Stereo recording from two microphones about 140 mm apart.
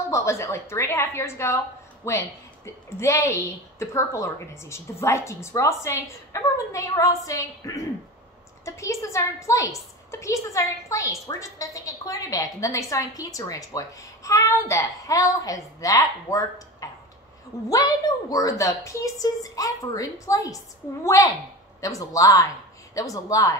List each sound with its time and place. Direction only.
0.1 s a woman's voice: 20° left (ahead or behind)